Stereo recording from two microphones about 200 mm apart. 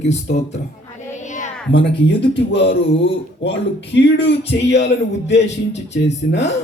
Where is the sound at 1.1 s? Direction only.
35° left (ahead or behind).